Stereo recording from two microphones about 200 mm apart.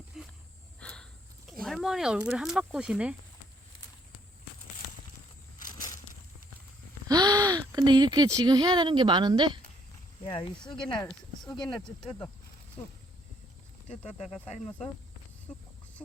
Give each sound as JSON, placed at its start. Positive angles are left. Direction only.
{"t": 0.1, "sound": "a sound", "side_deg": 0}
{"t": 1.6, "sound": "speech", "side_deg": 0}
{"t": 5.6, "sound": "a sound", "side_deg": 20}
{"t": 7.1, "sound": "speech", "side_deg": -20}
{"t": 10.2, "sound": "speech", "side_deg": 25}
{"t": 13.8, "sound": "speech", "side_deg": 35}